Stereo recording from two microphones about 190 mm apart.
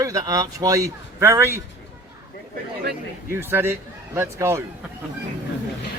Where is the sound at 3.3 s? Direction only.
10° right (ahead or behind).